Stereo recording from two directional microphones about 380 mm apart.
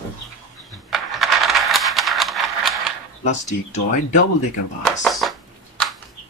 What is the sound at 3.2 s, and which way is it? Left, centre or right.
Speech, centre.